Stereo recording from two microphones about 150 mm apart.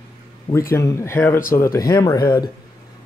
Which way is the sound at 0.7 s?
20° left (ahead or behind).